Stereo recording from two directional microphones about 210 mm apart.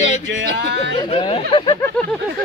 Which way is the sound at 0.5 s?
55° right (ahead or behind).